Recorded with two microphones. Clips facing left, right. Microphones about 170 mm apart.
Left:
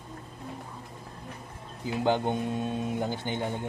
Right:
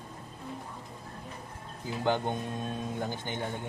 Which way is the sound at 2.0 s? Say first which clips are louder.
Left 3 dB; 15° left (ahead or behind).